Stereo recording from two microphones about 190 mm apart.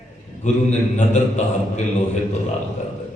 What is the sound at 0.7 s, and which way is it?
Speech, 40° left (ahead or behind).